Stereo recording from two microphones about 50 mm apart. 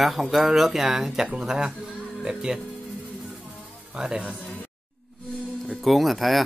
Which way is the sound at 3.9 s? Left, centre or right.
Centre.